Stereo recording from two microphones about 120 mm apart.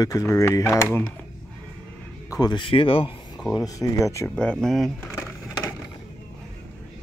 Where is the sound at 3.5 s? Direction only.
30° left (ahead or behind).